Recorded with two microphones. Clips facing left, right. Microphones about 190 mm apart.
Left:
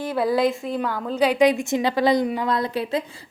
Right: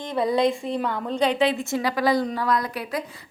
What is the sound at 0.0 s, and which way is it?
A woman's voice, 5° left (ahead or behind).